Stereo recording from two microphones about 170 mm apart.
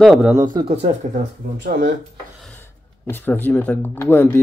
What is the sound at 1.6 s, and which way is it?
Speech, 55° right (ahead or behind).